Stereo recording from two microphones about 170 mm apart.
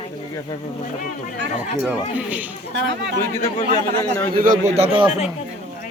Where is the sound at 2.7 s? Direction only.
90° right.